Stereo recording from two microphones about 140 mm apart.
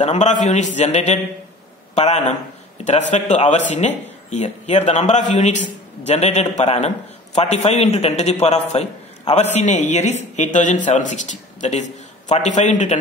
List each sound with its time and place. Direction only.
0.0 s a man's voice: 55° left (ahead or behind)